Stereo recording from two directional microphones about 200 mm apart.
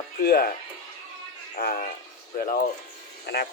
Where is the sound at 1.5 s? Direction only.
45° left (ahead or behind).